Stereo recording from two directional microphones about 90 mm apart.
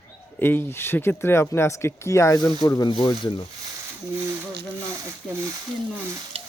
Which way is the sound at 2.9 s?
65° left (ahead or behind).